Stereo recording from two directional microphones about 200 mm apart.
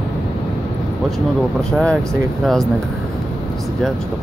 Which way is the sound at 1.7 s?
5° left (ahead or behind).